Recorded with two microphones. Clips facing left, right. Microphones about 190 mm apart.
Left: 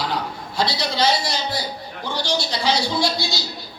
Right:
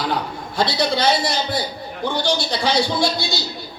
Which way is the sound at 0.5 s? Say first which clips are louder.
Right 4 dB; 55° right (ahead or behind).